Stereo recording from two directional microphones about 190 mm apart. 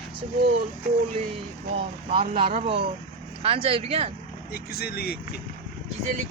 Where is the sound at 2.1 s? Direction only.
30° right (ahead or behind).